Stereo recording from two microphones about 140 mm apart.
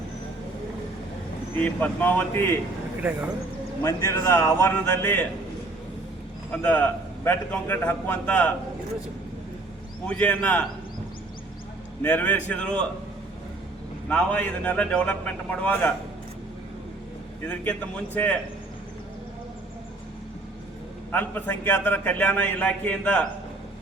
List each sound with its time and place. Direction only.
1.5 s a man's voice: 10° left (ahead or behind)
3.0 s speech: 10° right (ahead or behind)
3.8 s a man's voice: 20° left (ahead or behind)
6.5 s a man's voice: 10° left (ahead or behind)
10.1 s a man's voice: 10° left (ahead or behind)
12.0 s a man's voice: 10° left (ahead or behind)
14.1 s a man's voice: 10° left (ahead or behind)
17.4 s a man's voice: 10° left (ahead or behind)
21.1 s a man's voice: 15° left (ahead or behind)